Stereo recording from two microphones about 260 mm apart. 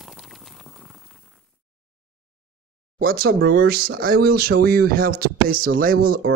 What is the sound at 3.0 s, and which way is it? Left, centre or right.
Speech, right.